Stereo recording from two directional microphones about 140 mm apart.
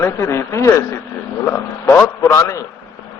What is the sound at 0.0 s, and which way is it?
Speech, 20° left (ahead or behind).